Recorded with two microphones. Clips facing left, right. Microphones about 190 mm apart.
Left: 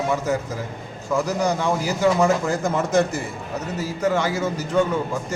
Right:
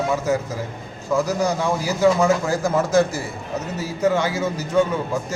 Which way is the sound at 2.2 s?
5° right (ahead or behind).